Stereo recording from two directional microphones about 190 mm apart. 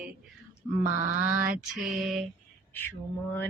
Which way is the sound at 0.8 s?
45° right (ahead or behind).